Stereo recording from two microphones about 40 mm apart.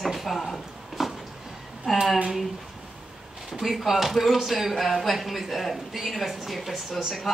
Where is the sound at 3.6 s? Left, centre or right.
Centre.